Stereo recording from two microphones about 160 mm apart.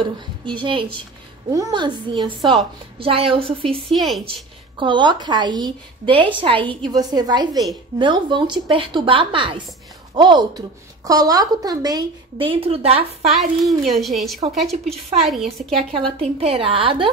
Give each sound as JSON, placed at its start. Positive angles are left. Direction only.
{"t": 0.0, "sound": "a woman's voice", "side_deg": -30}
{"t": 3.9, "sound": "a child's voice", "side_deg": 0}
{"t": 4.3, "sound": "a woman's voice", "side_deg": -30}
{"t": 13.2, "sound": "a child's voice", "side_deg": 0}
{"t": 15.9, "sound": "a woman's voice", "side_deg": -35}